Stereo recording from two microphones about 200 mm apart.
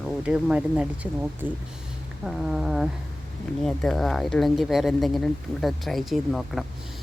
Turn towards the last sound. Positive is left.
turn(degrees=0)  # may be behind; listen again after turning